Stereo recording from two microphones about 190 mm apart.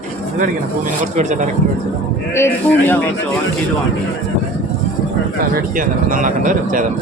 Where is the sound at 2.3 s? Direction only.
15° left (ahead or behind).